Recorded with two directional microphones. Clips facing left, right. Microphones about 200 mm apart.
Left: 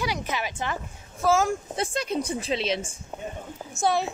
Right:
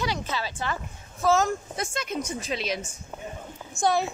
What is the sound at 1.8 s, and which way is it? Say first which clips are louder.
Speech: left 3 dB; 30° left (ahead or behind).